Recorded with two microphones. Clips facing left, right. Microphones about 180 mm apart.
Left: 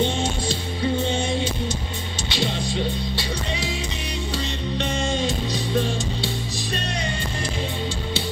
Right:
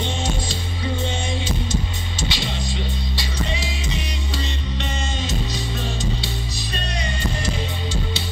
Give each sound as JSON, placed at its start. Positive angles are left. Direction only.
{"t": 0.0, "sound": "music", "side_deg": 60}
{"t": 2.3, "sound": "music", "side_deg": 55}